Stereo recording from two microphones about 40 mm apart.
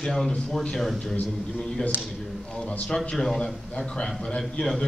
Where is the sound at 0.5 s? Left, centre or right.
Centre.